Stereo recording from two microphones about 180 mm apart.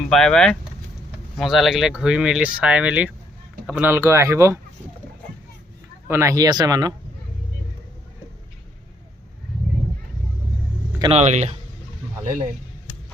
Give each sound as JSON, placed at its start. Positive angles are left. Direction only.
{"t": 0.1, "sound": "speech", "side_deg": 5}
{"t": 6.1, "sound": "speech", "side_deg": -15}
{"t": 11.1, "sound": "speech", "side_deg": -40}